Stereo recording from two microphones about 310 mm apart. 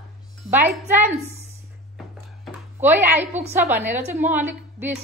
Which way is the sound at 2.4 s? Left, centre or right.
Centre.